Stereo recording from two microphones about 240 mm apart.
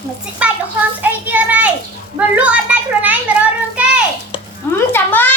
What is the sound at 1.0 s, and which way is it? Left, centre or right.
A child's voice, centre.